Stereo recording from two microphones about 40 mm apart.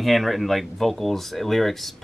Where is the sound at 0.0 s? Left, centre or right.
Centre.